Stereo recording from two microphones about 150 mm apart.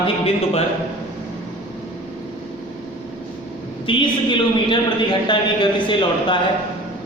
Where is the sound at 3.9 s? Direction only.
35° left (ahead or behind).